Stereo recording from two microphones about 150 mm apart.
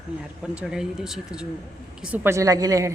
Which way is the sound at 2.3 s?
20° right (ahead or behind).